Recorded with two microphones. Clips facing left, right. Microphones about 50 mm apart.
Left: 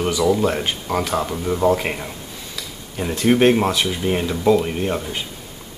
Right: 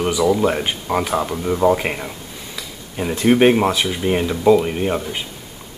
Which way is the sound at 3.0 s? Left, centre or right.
Centre.